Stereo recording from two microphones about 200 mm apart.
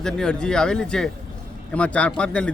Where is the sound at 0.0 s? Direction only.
5° left (ahead or behind).